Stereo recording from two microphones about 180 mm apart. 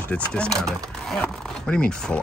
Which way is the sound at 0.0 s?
5° left (ahead or behind).